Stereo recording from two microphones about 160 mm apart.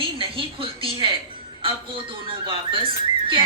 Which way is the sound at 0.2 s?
35° right (ahead or behind).